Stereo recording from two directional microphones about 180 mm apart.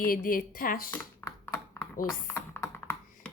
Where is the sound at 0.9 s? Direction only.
15° left (ahead or behind).